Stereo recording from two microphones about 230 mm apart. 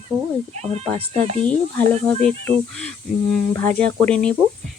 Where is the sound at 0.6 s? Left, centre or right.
Right.